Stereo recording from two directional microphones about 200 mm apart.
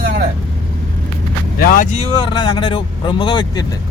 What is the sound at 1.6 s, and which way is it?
Speech, 40° left (ahead or behind).